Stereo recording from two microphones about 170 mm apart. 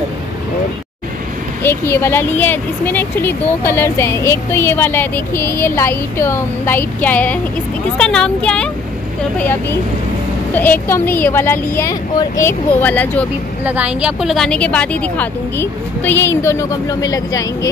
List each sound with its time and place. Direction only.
1.6 s speech: 15° left (ahead or behind)
13.7 s speech: 5° right (ahead or behind); by 17.6 s 20° left (ahead or behind)